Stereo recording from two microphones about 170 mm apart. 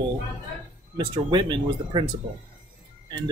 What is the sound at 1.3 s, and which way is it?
Speech, 25° right (ahead or behind).